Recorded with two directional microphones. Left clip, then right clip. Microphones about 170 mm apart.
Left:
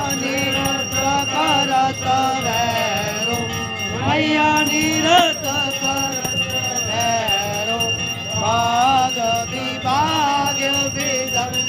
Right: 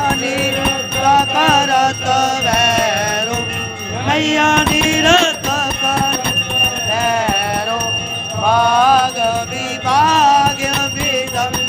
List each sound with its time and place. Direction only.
1.0 s music: 5° right (ahead or behind)
4.1 s music: 5° right (ahead or behind)
6.9 s music: 5° left (ahead or behind)
8.4 s music: 15° left (ahead or behind)
9.9 s music: 5° left (ahead or behind)